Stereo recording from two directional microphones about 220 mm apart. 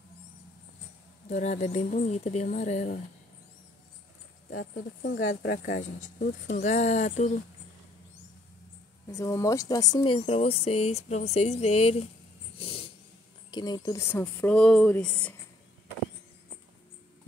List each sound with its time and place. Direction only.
1.3 s speech: 30° left (ahead or behind)
4.5 s speech: 45° left (ahead or behind)
9.1 s speech: 15° left (ahead or behind)
12.5 s dog: 25° left (ahead or behind)
13.5 s speech: 20° left (ahead or behind)